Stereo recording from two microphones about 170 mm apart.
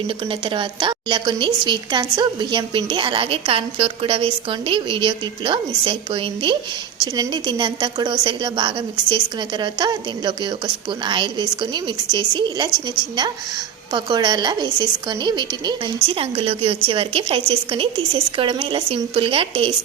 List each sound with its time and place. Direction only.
0.3 s a woman's voice: 30° right (ahead or behind)